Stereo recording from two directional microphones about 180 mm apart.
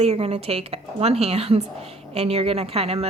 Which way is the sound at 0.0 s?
35° right (ahead or behind).